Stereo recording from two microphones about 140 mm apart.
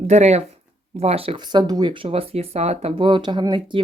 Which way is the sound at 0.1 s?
50° right (ahead or behind).